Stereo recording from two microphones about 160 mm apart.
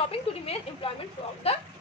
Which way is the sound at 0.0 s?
35° left (ahead or behind).